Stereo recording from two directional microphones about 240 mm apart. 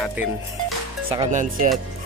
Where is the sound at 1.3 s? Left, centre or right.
Right.